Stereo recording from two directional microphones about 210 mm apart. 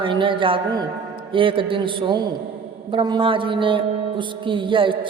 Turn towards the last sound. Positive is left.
turn(degrees=-25)  # may be behind; listen again after turning